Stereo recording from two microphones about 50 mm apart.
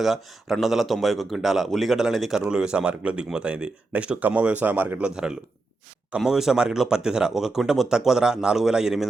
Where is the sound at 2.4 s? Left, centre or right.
Centre.